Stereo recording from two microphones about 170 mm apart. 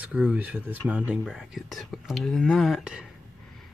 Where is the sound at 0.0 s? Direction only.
5° right (ahead or behind).